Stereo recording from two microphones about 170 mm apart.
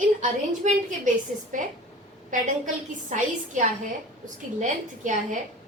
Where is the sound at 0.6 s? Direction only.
45° right (ahead or behind).